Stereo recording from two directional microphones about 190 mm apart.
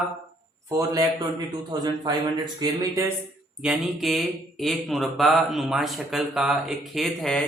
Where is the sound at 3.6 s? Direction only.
Centre (ahead or behind).